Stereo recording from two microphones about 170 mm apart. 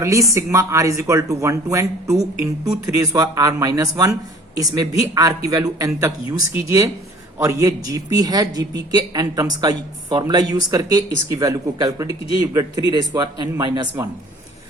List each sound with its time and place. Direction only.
0.0 s a man's voice: 20° right (ahead or behind)
12.0 s a man's voice: 35° left (ahead or behind)
12.4 s a man's voice: 20° right (ahead or behind)